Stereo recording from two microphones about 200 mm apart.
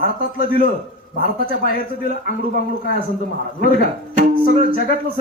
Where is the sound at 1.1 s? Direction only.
45° left (ahead or behind).